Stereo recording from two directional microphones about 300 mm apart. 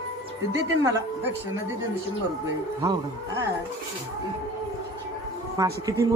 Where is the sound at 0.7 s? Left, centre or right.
Centre.